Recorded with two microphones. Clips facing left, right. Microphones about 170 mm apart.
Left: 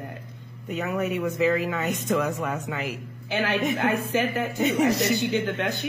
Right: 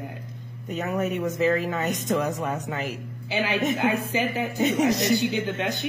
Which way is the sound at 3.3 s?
60° left (ahead or behind).